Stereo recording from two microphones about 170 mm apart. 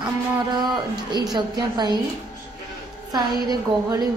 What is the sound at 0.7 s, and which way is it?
A woman's voice, 25° right (ahead or behind).